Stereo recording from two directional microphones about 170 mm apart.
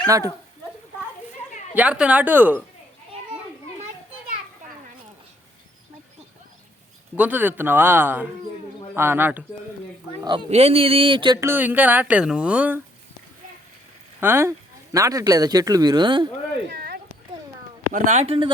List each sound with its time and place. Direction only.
0.1 s speech: 20° right (ahead or behind)
1.7 s a woman's voice: 10° right (ahead or behind)
7.2 s a woman's voice: 10° right (ahead or behind)
10.2 s speech: 35° right (ahead or behind)
11.3 s a woman's voice: 15° right (ahead or behind)
14.2 s speech: 15° right (ahead or behind)
16.6 s a sound: 65° right (ahead or behind)
17.9 s speech: 45° right (ahead or behind)